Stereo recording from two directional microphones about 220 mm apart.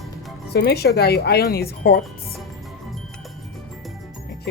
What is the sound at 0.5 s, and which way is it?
Speech, 45° left (ahead or behind).